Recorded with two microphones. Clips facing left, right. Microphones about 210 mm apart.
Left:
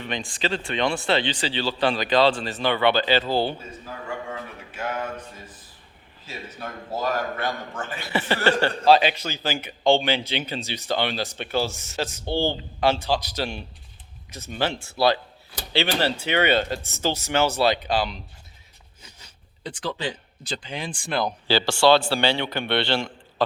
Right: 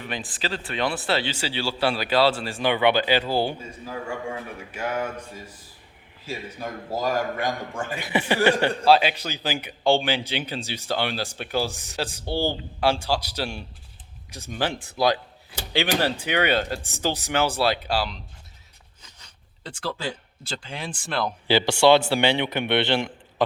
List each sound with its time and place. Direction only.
0.0 s speech: 5° right (ahead or behind)
4.7 s speech: 10° right (ahead or behind)
6.2 s speech: 10° right (ahead or behind)
19.6 s speech: 5° right (ahead or behind)
21.7 s speech: 20° right (ahead or behind)